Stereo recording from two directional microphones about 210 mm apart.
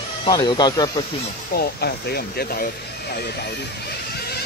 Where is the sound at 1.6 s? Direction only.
50° left (ahead or behind).